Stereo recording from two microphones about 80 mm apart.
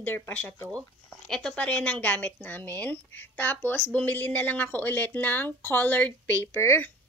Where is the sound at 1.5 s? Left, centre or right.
Centre.